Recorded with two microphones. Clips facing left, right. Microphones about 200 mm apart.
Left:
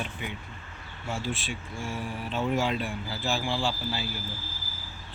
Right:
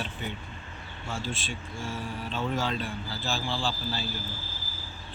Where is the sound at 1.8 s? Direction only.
55° left (ahead or behind).